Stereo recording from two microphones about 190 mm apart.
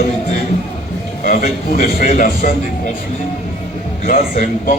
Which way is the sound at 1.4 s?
40° left (ahead or behind).